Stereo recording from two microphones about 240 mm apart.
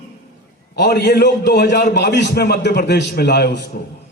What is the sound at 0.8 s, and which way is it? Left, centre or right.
A man's voice, left.